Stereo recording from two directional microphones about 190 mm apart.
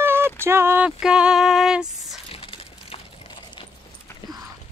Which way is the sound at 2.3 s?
30° left (ahead or behind).